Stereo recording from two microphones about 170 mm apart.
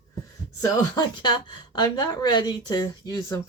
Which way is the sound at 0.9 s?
25° left (ahead or behind).